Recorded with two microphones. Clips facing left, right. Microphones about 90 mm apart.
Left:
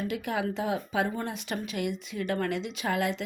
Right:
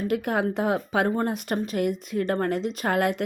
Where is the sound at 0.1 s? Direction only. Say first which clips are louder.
Right 6 dB; 50° right (ahead or behind).